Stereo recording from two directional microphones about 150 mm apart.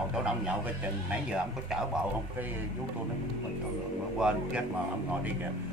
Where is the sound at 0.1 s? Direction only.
5° right (ahead or behind).